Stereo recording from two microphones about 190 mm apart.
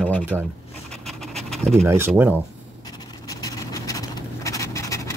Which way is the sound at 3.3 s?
20° left (ahead or behind).